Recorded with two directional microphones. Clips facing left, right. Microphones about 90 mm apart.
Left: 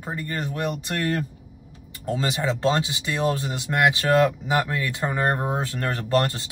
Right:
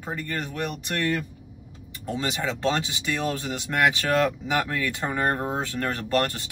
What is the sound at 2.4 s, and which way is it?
Speech, 20° left (ahead or behind).